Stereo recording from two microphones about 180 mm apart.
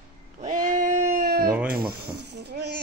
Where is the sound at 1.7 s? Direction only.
60° right (ahead or behind).